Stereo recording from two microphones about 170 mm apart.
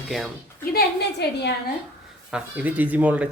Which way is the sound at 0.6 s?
65° left (ahead or behind).